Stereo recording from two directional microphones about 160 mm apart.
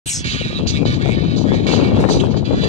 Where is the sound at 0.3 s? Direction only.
45° left (ahead or behind).